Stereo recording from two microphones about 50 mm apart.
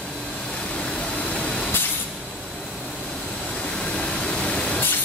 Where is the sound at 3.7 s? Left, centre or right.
Centre.